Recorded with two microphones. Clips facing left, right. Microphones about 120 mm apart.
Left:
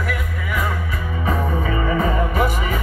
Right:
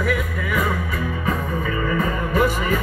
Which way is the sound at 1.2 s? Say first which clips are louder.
Left 5 dB; 25° left (ahead or behind).